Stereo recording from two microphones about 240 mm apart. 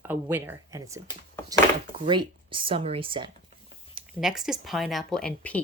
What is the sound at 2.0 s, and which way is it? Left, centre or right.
Speech, right.